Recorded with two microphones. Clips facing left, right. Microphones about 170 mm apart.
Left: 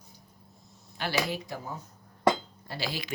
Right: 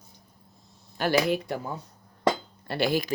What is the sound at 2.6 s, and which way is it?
Speech, 60° right (ahead or behind).